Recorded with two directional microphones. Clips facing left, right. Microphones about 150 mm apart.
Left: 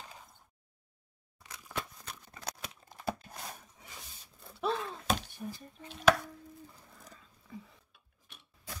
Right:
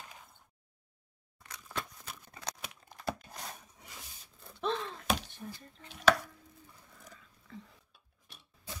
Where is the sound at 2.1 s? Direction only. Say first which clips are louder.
Even; 5° right (ahead or behind).